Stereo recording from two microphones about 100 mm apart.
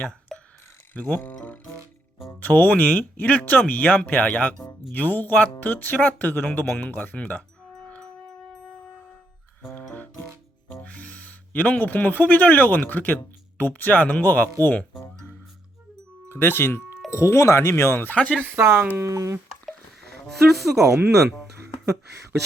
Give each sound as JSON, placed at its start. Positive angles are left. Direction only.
{"t": 0.3, "sound": "a sound", "side_deg": 5}
{"t": 0.9, "sound": "speech", "side_deg": 15}
{"t": 7.8, "sound": "music", "side_deg": 10}
{"t": 10.7, "sound": "speech", "side_deg": 15}
{"t": 16.3, "sound": "speech", "side_deg": 20}
{"t": 18.2, "sound": "speech", "side_deg": 10}
{"t": 18.5, "sound": "speech", "side_deg": -25}
{"t": 20.2, "sound": "speech", "side_deg": 0}